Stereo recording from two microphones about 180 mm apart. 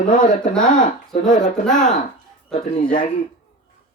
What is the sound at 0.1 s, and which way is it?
Speech, 50° left (ahead or behind).